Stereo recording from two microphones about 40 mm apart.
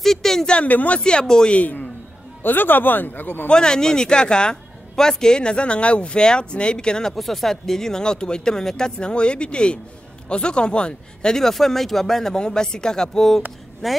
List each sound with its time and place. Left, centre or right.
0.0 s a sound: centre
0.7 s speech: left
0.9 s speech: left
1.5 s a man's voice: left
2.4 s speech: left
3.4 s speech: centre
7.1 s speech: centre; by 11.3 s left
11.3 s a woman's voice: centre